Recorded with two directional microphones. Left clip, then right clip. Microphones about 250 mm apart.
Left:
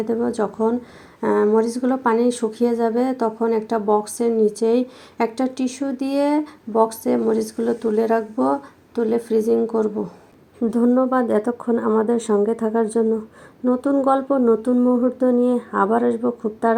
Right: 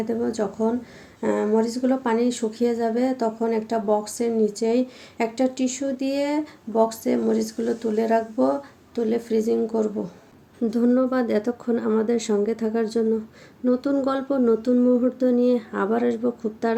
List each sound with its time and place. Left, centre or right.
0.0 s speech: centre